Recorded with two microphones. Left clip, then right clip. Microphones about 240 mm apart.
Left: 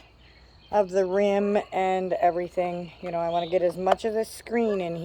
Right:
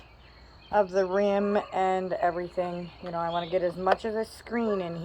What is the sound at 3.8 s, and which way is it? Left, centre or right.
Speech, left.